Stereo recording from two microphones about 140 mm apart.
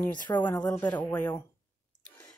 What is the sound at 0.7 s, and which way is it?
Speech, 10° left (ahead or behind).